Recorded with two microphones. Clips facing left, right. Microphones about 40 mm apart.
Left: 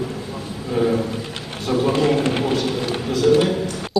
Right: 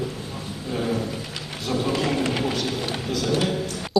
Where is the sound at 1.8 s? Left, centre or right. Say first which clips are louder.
Left 6 dB; left.